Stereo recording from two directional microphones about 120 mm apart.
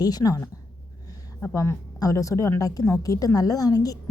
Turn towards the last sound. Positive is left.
turn(degrees=30)  # may be behind; listen again after turning